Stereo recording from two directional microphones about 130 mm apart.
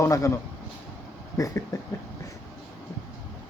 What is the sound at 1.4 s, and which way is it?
Speech, 25° left (ahead or behind).